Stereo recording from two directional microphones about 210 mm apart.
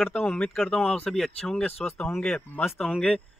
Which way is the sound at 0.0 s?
10° left (ahead or behind).